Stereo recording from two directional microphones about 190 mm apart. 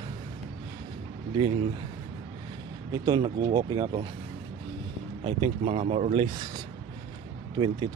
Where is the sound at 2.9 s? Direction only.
25° right (ahead or behind).